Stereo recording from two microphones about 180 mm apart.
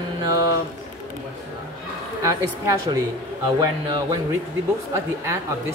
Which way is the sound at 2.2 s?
20° right (ahead or behind).